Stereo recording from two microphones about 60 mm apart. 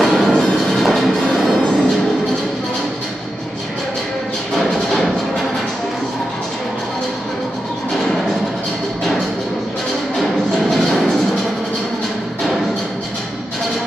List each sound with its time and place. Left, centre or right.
0.0 s music: centre
10.1 s music: centre